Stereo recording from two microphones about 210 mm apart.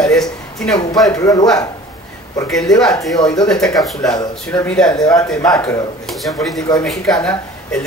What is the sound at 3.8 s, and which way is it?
Speech, centre (ahead or behind).